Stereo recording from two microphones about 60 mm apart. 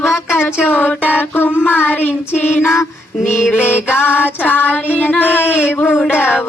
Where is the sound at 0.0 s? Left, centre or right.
Left.